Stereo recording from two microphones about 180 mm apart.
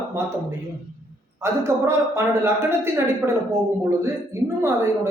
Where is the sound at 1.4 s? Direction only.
15° right (ahead or behind).